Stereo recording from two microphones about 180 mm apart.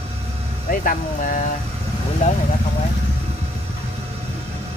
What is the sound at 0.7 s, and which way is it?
Speech, 50° left (ahead or behind).